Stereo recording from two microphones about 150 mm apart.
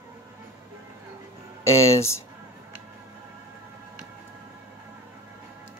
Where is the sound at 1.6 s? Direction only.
20° left (ahead or behind).